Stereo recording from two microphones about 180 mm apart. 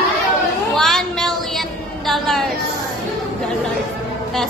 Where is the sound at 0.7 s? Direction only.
Centre (ahead or behind).